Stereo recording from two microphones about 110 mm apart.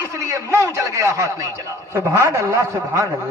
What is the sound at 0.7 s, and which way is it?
A man's voice, 30° right (ahead or behind).